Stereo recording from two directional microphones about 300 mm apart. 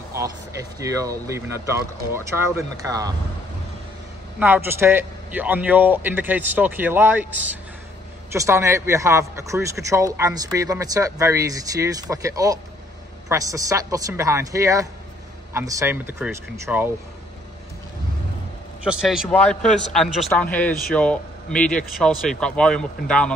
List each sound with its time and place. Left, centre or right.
0.1 s a man's voice: centre
4.4 s a man's voice: centre
18.9 s a man's voice: centre